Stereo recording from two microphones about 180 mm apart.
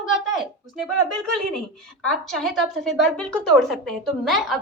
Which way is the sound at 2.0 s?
Centre (ahead or behind).